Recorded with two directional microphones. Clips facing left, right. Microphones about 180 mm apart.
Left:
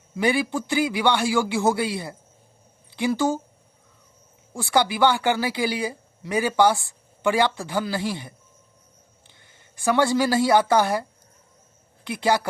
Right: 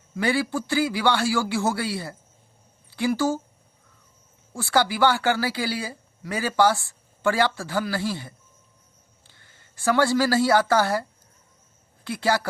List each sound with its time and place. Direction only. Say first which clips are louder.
0.2 s a woman's voice: left 2 dB; 15° left (ahead or behind)
4.5 s a woman's voice: left 1 dB; 20° left (ahead or behind)
12.0 s a woman's voice: left 2 dB; 15° left (ahead or behind)